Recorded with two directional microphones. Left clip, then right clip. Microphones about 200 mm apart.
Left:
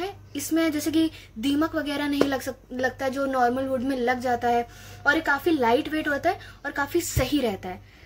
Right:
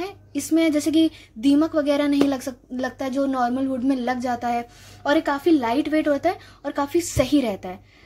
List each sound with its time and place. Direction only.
0.0 s speech: 40° right (ahead or behind)